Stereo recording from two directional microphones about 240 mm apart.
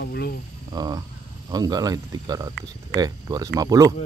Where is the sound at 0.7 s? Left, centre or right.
Centre.